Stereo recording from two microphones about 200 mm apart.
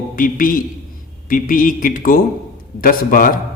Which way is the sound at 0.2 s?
45° left (ahead or behind).